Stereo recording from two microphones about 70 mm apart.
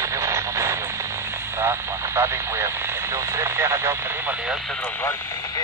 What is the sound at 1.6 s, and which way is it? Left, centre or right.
Speech, right.